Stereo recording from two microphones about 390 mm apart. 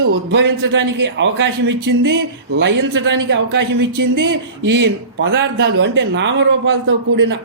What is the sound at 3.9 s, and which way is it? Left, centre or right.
Speech, right.